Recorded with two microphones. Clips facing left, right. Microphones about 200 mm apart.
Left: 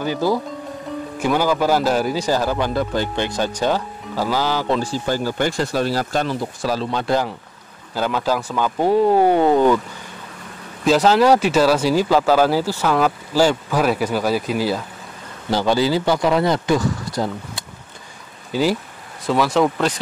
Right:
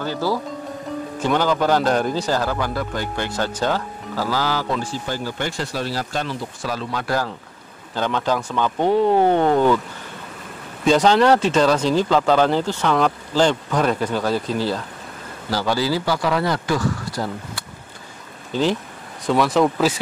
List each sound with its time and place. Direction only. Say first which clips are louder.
0.0 s speech: left 3 dB; 15° left (ahead or behind)
3.3 s speech: left 2 dB; 15° left (ahead or behind)
5.0 s speech: left 5 dB; 40° left (ahead or behind); by 7.3 s 20° left (ahead or behind)
7.9 s speech: left 1 dB; 5° left (ahead or behind)
10.8 s speech: left 1 dB; 5° left (ahead or behind); by 17.6 s 20° left (ahead or behind)
18.5 s speech: left 1 dB; 10° left (ahead or behind)